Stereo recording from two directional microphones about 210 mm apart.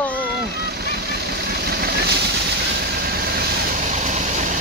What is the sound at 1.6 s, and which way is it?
Vehicle, 50° right (ahead or behind).